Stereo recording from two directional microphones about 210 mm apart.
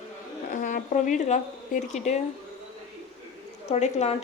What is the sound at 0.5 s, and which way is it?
A woman's voice, 35° left (ahead or behind).